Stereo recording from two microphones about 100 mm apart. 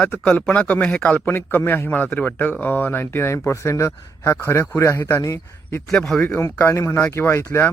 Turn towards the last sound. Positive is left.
turn(degrees=25)  # may be behind; listen again after turning